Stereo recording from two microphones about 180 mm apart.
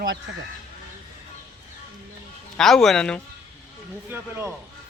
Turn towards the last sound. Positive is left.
turn(degrees=-15)  # may be behind; listen again after turning